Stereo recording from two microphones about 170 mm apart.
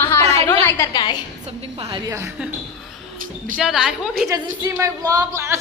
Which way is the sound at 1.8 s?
30° right (ahead or behind).